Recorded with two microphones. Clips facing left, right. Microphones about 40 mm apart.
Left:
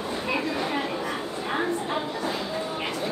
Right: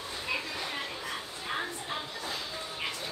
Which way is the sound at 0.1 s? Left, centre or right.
Left.